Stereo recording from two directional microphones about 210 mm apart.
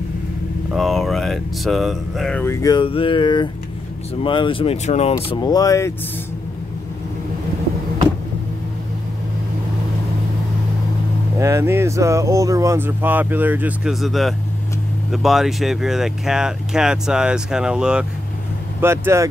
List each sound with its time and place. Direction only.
0.7 s speech: centre (ahead or behind); by 5.1 s 30° left (ahead or behind)
5.1 s speech: 20° left (ahead or behind)
11.3 s speech: 15° right (ahead or behind)